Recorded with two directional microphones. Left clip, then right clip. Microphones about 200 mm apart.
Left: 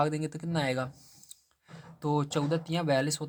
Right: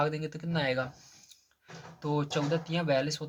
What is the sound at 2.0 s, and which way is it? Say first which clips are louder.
Speech: left 1 dB; 50° left (ahead or behind).